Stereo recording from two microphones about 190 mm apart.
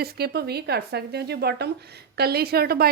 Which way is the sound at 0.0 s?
55° right (ahead or behind).